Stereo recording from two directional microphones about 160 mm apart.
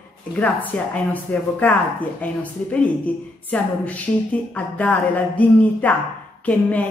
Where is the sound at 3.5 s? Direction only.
10° left (ahead or behind).